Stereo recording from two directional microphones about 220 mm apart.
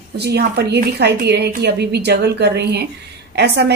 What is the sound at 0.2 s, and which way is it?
A woman's voice, 50° right (ahead or behind).